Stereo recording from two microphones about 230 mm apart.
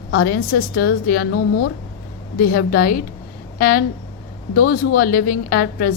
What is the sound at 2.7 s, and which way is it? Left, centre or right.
Speech, left.